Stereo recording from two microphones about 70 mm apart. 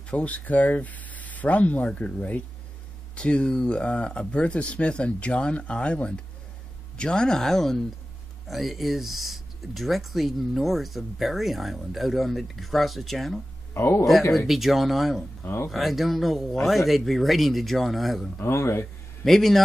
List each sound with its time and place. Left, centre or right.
0.1 s speech: centre
13.7 s speech: left
14.5 s speech: centre
15.4 s speech: left
15.7 s speech: centre
18.4 s speech: left
19.2 s speech: centre